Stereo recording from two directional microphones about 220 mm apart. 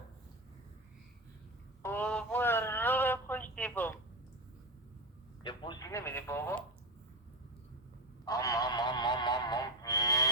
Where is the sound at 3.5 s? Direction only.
5° left (ahead or behind).